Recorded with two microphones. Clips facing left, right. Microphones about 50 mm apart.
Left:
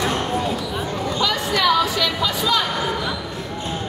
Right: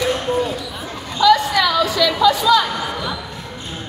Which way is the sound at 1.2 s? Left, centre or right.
Centre.